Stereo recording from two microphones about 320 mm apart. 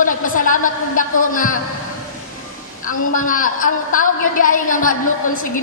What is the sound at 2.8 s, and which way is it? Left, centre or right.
A woman's voice, left.